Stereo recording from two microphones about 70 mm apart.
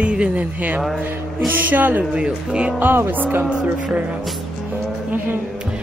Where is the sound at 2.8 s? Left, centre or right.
Right.